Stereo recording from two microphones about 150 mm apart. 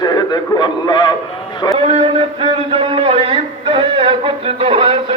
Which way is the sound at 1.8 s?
40° right (ahead or behind).